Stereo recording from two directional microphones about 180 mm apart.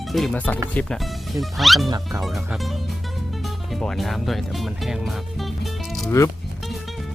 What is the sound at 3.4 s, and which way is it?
Music, centre (ahead or behind).